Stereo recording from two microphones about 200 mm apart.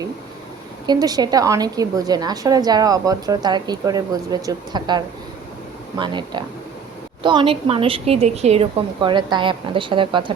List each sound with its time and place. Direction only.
0.9 s a woman's voice: 20° right (ahead or behind)